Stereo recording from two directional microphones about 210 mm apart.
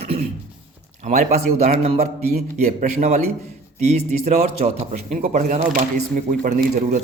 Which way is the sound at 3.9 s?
30° right (ahead or behind).